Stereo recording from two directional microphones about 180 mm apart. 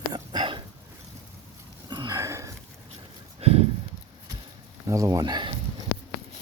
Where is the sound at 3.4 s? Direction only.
35° right (ahead or behind).